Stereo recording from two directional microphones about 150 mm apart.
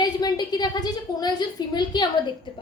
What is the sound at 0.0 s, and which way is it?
A woman's voice, 25° left (ahead or behind).